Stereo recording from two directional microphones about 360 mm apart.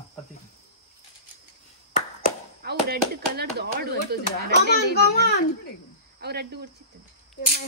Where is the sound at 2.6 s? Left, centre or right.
Right.